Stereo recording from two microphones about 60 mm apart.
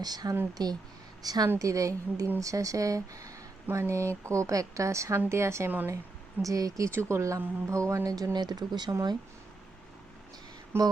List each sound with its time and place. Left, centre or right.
0.0 s speech: right
1.5 s a woman's voice: right
3.7 s a woman's voice: right
6.4 s speech: right
6.9 s a woman's voice: right
10.7 s a woman's voice: right